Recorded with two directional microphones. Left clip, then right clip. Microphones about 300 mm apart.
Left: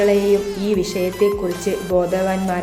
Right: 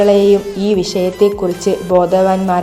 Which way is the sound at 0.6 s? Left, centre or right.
Centre.